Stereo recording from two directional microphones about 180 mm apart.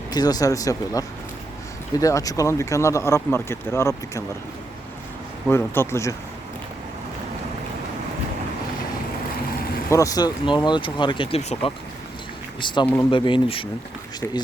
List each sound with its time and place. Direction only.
0.1 s speech: 20° left (ahead or behind)
5.5 s speech: 15° left (ahead or behind)
9.9 s speech: 20° left (ahead or behind)
12.8 s speech: 10° left (ahead or behind)
13.1 s speech: 25° left (ahead or behind)